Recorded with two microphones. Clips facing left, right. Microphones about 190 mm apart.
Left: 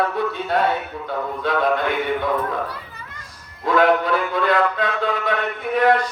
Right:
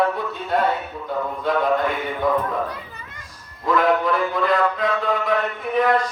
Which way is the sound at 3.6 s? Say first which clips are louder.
Left 2 dB; 75° left (ahead or behind).